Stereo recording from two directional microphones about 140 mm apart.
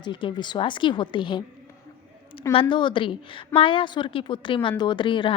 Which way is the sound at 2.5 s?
40° left (ahead or behind).